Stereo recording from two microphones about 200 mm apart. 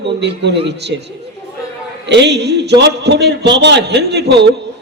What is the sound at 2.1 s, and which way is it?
A man's voice, 60° right (ahead or behind).